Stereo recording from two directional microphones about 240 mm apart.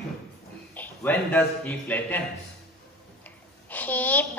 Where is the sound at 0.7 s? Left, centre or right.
Centre.